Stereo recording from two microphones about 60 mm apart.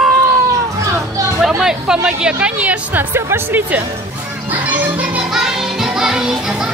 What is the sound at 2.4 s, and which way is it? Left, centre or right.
Speech, right.